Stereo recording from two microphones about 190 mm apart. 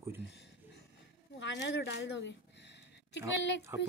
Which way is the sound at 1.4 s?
70° left (ahead or behind).